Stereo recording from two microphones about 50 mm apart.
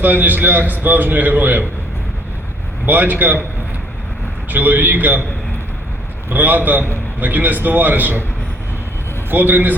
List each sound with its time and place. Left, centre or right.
0.0 s a man's voice: right
2.8 s a man's voice: right
4.4 s a man's voice: right
6.3 s a man's voice: right
9.3 s a man's voice: right